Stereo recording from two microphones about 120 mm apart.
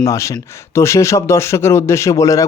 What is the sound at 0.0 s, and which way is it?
A man's voice, 25° left (ahead or behind).